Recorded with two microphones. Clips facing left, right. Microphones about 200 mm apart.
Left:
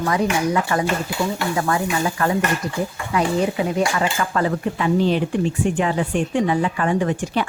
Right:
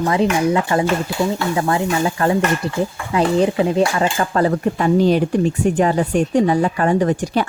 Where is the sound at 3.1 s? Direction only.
30° right (ahead or behind).